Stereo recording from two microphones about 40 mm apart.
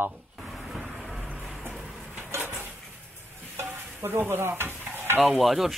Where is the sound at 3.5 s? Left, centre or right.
Right.